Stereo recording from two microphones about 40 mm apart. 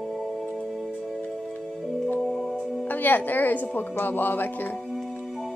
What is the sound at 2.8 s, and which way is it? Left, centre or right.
A woman's voice, left.